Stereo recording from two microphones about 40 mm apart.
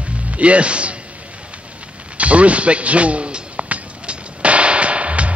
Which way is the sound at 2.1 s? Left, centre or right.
Right.